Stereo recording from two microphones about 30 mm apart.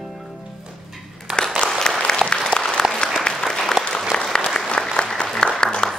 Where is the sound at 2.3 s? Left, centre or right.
Left.